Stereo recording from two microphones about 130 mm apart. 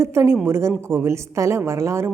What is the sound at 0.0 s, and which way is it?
A woman's voice, 20° right (ahead or behind).